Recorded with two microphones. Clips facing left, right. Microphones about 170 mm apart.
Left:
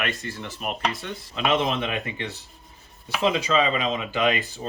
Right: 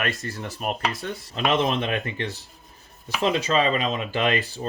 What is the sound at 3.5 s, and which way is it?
Speech, 40° right (ahead or behind).